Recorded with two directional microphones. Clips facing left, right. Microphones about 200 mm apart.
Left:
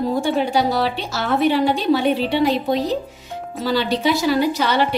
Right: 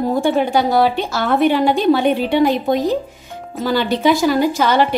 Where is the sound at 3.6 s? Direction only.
50° right (ahead or behind).